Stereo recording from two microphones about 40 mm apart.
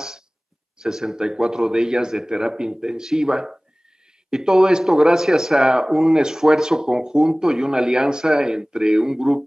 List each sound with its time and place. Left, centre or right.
0.7 s a man's voice: centre